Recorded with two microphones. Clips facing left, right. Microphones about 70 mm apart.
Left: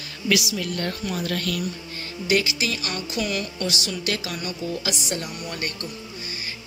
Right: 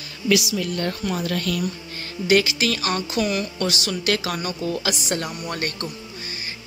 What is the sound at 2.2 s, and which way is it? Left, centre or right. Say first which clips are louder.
Speech: right 4 dB; right.